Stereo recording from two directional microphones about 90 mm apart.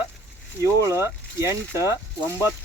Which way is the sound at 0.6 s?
35° right (ahead or behind).